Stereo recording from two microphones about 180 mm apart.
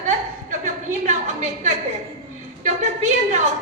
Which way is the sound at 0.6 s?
40° right (ahead or behind).